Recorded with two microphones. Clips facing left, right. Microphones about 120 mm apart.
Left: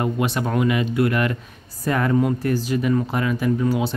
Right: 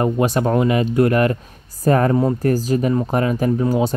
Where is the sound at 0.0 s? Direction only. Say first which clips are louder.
Right 5 dB; 40° right (ahead or behind).